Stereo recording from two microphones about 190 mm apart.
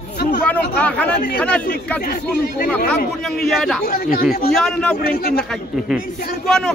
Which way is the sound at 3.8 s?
50° left (ahead or behind).